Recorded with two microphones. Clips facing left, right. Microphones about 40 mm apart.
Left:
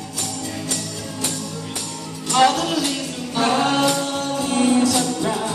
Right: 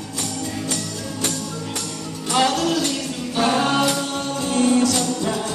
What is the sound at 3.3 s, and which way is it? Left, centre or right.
Music, centre.